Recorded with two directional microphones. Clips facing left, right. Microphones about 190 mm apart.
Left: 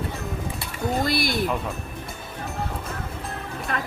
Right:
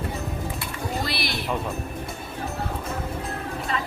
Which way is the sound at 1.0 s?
45° left (ahead or behind).